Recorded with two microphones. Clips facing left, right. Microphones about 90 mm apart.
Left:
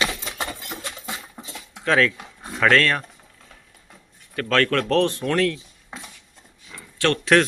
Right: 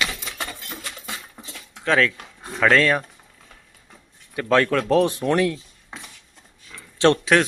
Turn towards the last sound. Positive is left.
turn(degrees=0)  # may be behind; listen again after turning